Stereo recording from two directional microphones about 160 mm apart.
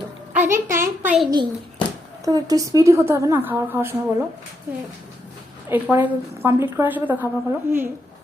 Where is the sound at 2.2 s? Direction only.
20° right (ahead or behind).